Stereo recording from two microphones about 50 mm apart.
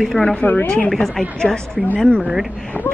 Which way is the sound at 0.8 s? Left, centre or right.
Centre.